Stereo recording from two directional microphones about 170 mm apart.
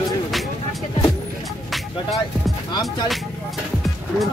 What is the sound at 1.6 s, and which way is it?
Music, centre (ahead or behind).